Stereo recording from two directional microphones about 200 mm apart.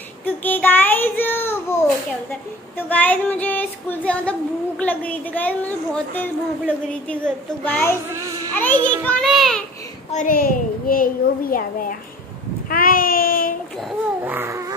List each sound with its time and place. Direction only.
0.2 s a sound: 10° left (ahead or behind)
2.9 s child singing: 10° left (ahead or behind)
7.6 s child singing: 10° left (ahead or behind)
8.1 s a child's voice: 15° right (ahead or behind)
8.5 s child singing: 10° left (ahead or behind)
9.0 s a child's voice: 5° left (ahead or behind)
10.1 s a child's voice: 45° left (ahead or behind)
12.6 s child singing: 45° left (ahead or behind)
14.2 s a sound: 10° right (ahead or behind)